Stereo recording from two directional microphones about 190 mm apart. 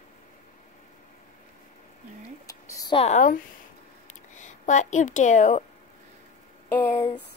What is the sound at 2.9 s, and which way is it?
Speech, 40° left (ahead or behind).